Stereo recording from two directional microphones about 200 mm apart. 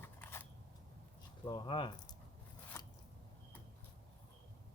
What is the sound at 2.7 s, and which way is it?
Biting, 15° left (ahead or behind).